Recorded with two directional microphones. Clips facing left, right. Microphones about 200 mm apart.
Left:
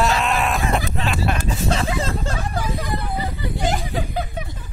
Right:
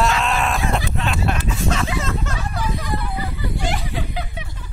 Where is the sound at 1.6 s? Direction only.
35° left (ahead or behind).